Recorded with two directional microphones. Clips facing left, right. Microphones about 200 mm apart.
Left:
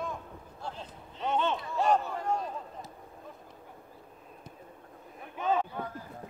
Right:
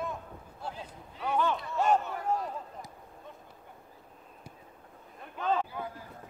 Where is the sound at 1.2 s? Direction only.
25° left (ahead or behind).